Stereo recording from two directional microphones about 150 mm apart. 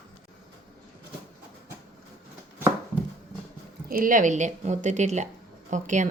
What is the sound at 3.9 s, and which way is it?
Speech, 65° right (ahead or behind).